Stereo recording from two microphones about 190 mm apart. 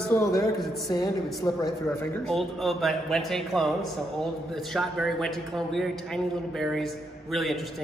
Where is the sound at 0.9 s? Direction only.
20° left (ahead or behind).